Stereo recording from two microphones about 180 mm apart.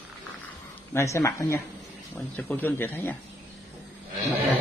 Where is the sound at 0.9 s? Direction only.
15° left (ahead or behind).